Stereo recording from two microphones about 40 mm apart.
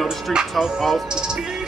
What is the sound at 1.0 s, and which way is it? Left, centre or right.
Speech, centre.